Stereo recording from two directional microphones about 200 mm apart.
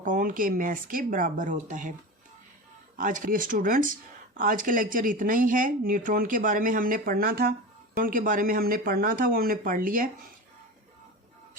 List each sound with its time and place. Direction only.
0.0 s speech: 40° right (ahead or behind)
2.9 s speech: 40° right (ahead or behind)